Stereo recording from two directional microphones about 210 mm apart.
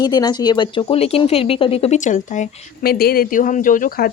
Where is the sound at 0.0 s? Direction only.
20° left (ahead or behind).